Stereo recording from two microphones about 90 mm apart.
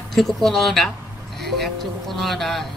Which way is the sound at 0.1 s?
5° left (ahead or behind).